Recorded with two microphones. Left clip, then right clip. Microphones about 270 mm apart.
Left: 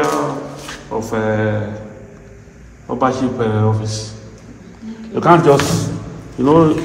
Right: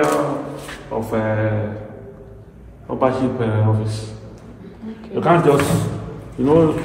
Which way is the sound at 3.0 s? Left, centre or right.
Left.